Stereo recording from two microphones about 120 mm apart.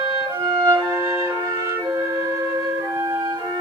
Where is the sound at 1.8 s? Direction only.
25° right (ahead or behind).